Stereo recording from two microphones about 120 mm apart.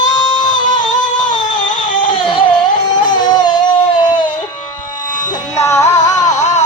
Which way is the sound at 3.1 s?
35° left (ahead or behind).